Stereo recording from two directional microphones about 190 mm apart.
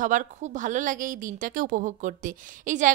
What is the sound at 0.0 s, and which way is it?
A woman's voice, 40° right (ahead or behind).